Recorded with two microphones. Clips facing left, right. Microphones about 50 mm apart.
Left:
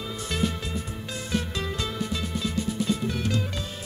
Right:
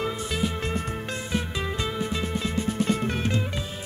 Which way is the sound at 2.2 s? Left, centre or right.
Right.